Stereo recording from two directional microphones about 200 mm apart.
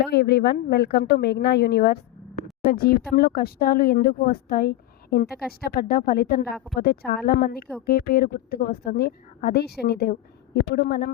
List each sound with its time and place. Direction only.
0.0 s a woman's voice: 55° left (ahead or behind)